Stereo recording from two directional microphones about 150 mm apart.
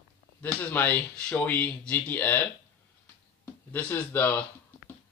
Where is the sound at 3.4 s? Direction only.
15° left (ahead or behind).